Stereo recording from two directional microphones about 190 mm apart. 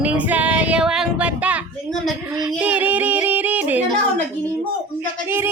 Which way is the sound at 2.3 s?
20° right (ahead or behind).